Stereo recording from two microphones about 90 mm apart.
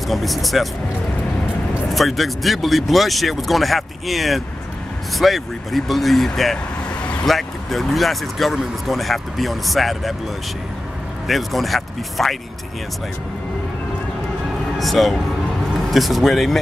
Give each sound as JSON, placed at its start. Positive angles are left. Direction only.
{"t": 0.1, "sound": "speech", "side_deg": 0}
{"t": 1.9, "sound": "speech", "side_deg": 0}
{"t": 11.2, "sound": "speech", "side_deg": 0}
{"t": 14.8, "sound": "speech", "side_deg": 0}